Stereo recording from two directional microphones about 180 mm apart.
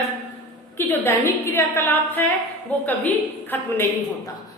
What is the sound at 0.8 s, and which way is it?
A woman's voice, 15° left (ahead or behind).